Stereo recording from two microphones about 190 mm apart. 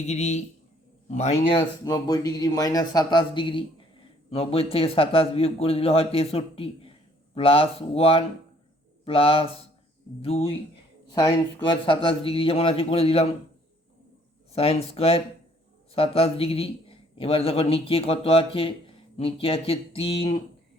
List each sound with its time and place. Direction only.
0.0 s a man's voice: 35° left (ahead or behind)
11.7 s speech: 25° left (ahead or behind)
14.5 s a man's voice: 30° left (ahead or behind)